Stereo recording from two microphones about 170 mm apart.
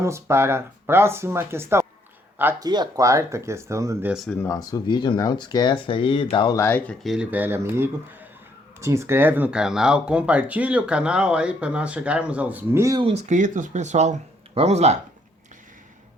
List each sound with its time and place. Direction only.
0.0 s speech: 15° right (ahead or behind)
2.6 s speech: 25° right (ahead or behind)
4.1 s speech: centre (ahead or behind)
4.4 s speech: 20° left (ahead or behind)
6.6 s speech: 10° left (ahead or behind)
7.0 s speech: 5° right (ahead or behind)
13.0 s speech: 40° right (ahead or behind)